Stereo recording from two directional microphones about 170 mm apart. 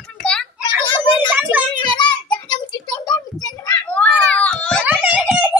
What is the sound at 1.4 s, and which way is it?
Child singing, 10° right (ahead or behind).